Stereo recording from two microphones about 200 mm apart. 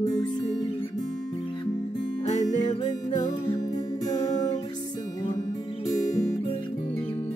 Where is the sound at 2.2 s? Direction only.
35° left (ahead or behind).